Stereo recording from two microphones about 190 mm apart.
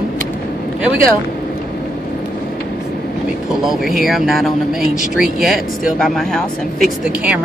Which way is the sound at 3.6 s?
Centre (ahead or behind).